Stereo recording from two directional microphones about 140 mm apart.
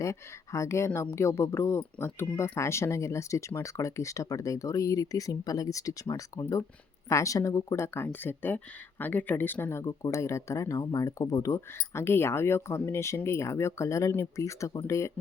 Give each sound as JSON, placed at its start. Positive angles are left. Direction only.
{"t": 0.0, "sound": "speech", "side_deg": 20}